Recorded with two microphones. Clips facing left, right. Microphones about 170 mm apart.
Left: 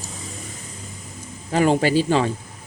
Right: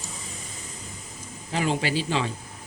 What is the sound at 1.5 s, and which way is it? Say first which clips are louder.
Speech: left 8 dB; 50° left (ahead or behind).